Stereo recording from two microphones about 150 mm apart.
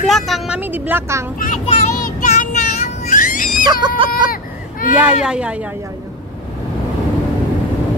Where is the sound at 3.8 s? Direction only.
35° right (ahead or behind).